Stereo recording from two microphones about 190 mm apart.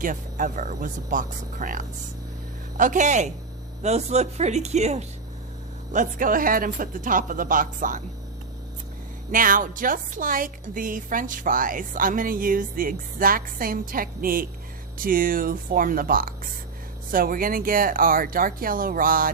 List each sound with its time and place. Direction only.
0.0 s a woman's voice: 45° right (ahead or behind)
9.3 s a woman's voice: 45° right (ahead or behind)